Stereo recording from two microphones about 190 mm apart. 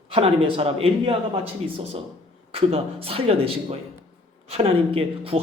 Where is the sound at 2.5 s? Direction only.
30° right (ahead or behind).